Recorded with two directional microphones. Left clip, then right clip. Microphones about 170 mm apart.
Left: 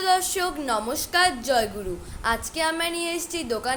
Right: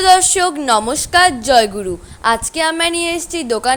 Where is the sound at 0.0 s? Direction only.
45° right (ahead or behind).